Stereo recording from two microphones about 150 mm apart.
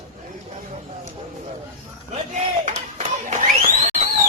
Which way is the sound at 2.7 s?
50° right (ahead or behind).